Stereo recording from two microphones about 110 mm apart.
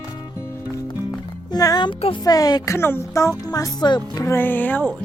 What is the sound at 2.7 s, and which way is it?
Speech, 20° left (ahead or behind).